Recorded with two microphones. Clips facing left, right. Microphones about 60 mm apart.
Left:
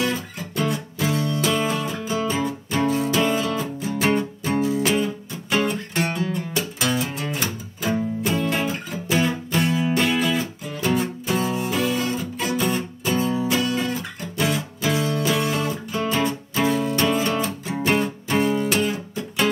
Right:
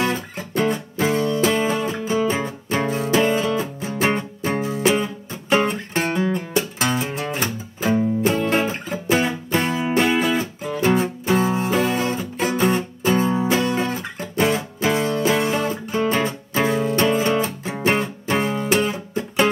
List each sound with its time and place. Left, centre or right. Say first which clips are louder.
0.0 s music: right 2 dB; right
9.8 s music: right 2 dB; right